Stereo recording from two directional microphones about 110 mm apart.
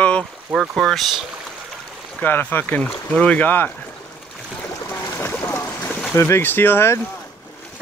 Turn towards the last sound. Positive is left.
turn(degrees=20)  # may be behind; listen again after turning